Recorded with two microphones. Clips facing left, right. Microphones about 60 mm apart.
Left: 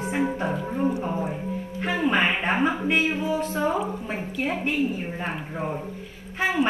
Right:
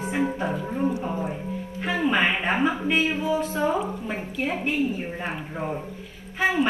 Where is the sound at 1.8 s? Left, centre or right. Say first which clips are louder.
Even; left.